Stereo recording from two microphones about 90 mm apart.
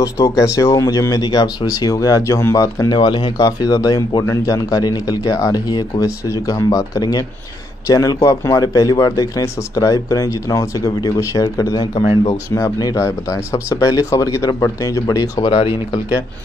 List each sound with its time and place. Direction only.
0.0 s speech: 35° left (ahead or behind)
2.9 s speech: 55° left (ahead or behind)
3.3 s speech: 45° left (ahead or behind)
15.4 s speech: 90° left